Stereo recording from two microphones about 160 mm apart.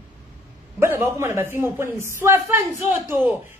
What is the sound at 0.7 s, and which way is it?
A man's voice, 15° right (ahead or behind).